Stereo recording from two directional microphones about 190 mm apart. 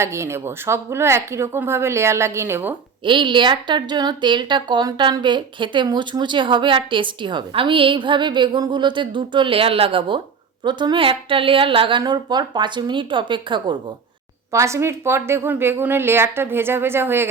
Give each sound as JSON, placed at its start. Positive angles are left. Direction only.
{"t": 0.0, "sound": "speech", "side_deg": -15}
{"t": 3.0, "sound": "a woman's voice", "side_deg": -25}